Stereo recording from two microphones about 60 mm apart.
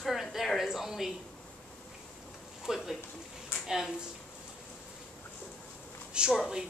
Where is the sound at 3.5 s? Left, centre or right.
Left.